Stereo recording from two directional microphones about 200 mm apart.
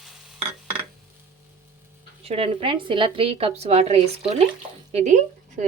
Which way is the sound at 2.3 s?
30° right (ahead or behind).